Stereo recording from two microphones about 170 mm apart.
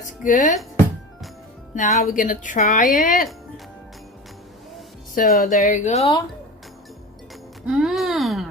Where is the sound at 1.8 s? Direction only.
50° left (ahead or behind).